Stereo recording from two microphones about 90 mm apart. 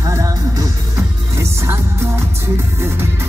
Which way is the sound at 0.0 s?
40° right (ahead or behind).